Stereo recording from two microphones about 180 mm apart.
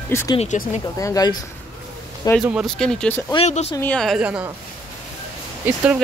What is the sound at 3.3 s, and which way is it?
Speech, 40° left (ahead or behind).